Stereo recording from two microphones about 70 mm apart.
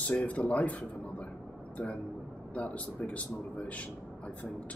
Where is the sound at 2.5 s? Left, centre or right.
Left.